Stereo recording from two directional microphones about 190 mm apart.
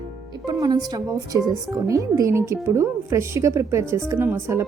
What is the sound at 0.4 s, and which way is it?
A woman's voice, 20° right (ahead or behind).